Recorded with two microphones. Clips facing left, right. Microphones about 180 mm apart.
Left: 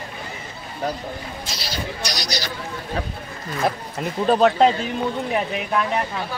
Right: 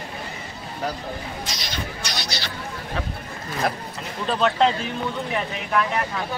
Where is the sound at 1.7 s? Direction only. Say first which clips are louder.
Left 4 dB; 35° left (ahead or behind).